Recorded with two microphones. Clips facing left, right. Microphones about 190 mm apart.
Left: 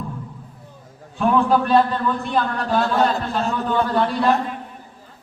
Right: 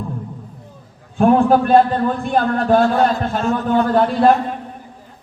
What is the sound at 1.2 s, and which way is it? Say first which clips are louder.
A man's voice: right 5 dB; 50° right (ahead or behind).